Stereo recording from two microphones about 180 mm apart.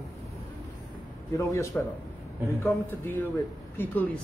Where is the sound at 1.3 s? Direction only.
15° left (ahead or behind).